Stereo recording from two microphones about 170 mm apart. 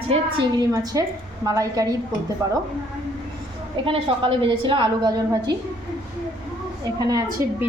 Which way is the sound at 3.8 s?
30° right (ahead or behind).